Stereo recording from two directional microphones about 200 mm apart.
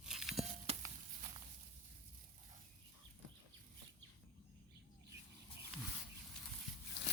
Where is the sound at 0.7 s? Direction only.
30° right (ahead or behind).